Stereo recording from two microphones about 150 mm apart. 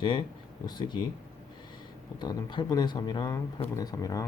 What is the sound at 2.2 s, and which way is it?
Speech, 30° left (ahead or behind).